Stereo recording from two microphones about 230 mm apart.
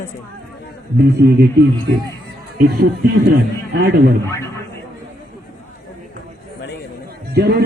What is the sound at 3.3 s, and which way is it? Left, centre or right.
Speech, right.